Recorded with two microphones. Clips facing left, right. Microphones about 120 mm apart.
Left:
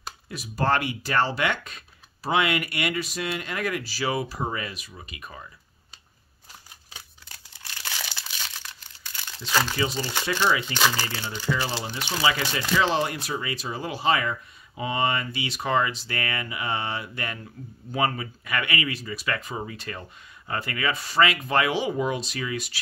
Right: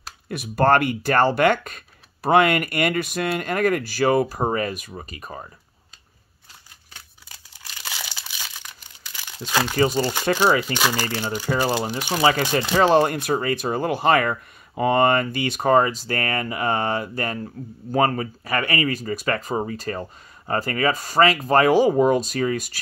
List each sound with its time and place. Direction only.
0.3 s speech: 55° right (ahead or behind); by 5.5 s 40° right (ahead or behind)
7.8 s crumpling: 10° right (ahead or behind)
9.5 s speech: 15° right (ahead or behind)
9.8 s speech: 45° right (ahead or behind)
10.7 s speech: 15° right (ahead or behind)
11.4 s speech: 45° right (ahead or behind)